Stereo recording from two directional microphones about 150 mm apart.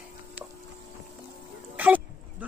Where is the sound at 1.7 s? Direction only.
10° right (ahead or behind).